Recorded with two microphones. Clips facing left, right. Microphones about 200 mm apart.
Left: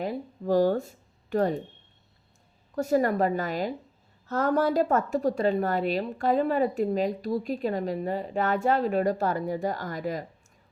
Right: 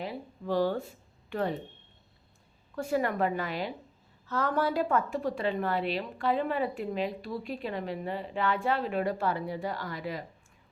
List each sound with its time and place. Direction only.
0.0 s speech: 45° left (ahead or behind)
2.7 s speech: 40° left (ahead or behind)